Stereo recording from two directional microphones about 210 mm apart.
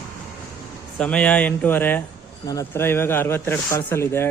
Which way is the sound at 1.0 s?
5° left (ahead or behind).